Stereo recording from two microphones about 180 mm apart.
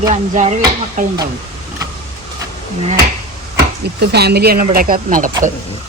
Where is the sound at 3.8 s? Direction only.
65° right (ahead or behind); by 5.3 s 45° right (ahead or behind).